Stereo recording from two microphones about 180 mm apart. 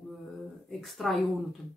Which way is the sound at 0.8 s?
Centre (ahead or behind).